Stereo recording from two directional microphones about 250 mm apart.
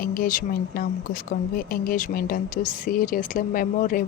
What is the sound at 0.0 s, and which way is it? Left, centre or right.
Speech, left.